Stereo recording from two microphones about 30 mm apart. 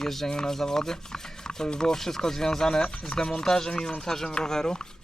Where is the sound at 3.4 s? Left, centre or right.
Centre.